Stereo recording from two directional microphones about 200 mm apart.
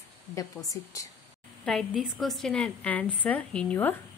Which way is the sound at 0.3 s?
15° left (ahead or behind).